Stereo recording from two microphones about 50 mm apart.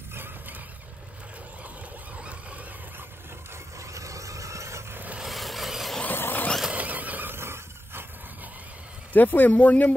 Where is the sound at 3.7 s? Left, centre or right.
Right.